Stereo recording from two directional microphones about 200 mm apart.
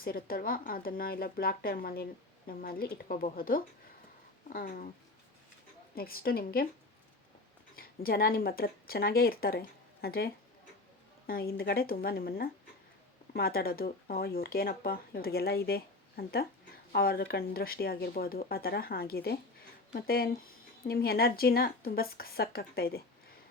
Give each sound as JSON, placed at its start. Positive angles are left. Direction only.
{"t": 0.0, "sound": "speech", "side_deg": 45}
{"t": 5.9, "sound": "speech", "side_deg": 50}
{"t": 7.8, "sound": "speech", "side_deg": 50}